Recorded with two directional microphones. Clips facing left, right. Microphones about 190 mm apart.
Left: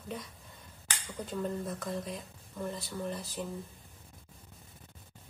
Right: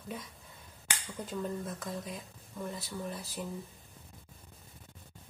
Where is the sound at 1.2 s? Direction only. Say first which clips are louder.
Left 2 dB; centre (ahead or behind).